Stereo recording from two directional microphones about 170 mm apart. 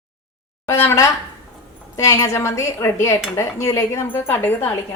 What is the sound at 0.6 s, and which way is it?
A woman's voice, 15° left (ahead or behind).